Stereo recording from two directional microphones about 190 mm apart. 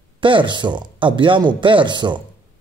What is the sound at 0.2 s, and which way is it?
Speech, 25° right (ahead or behind).